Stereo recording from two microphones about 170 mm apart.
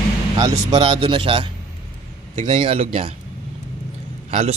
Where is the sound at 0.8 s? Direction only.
30° right (ahead or behind).